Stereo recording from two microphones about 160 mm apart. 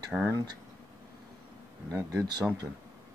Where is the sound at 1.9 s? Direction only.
15° right (ahead or behind).